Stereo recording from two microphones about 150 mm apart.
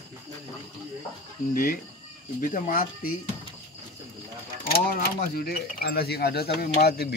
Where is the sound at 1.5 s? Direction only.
65° left (ahead or behind).